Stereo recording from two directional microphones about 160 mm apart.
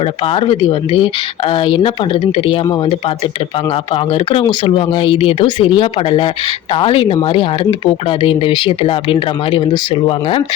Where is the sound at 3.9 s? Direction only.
35° left (ahead or behind).